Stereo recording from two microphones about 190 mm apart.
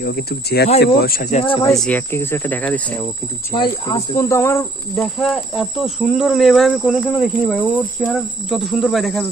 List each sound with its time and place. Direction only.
0.0 s speech: 55° left (ahead or behind)
1.4 s speech: 25° left (ahead or behind)
1.8 s speech: 10° left (ahead or behind)
3.5 s speech: 20° left (ahead or behind); by 9.3 s centre (ahead or behind)